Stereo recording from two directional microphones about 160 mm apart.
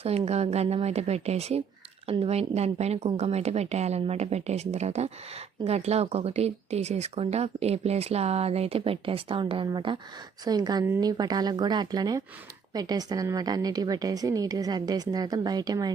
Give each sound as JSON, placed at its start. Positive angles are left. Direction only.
{"t": 0.0, "sound": "a woman's voice", "side_deg": -40}